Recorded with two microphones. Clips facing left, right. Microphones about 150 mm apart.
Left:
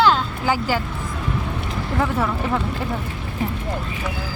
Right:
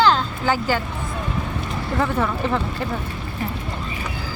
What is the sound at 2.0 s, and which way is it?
Speech, 5° left (ahead or behind).